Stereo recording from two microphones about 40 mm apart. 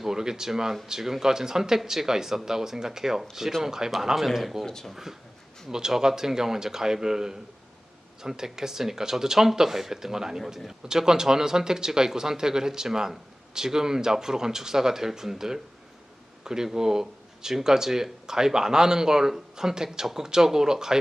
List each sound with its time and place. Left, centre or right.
0.0 s speech: centre
4.6 s speech: centre
5.7 s speech: centre